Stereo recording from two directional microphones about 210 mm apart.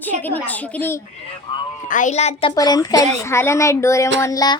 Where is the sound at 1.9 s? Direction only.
35° left (ahead or behind).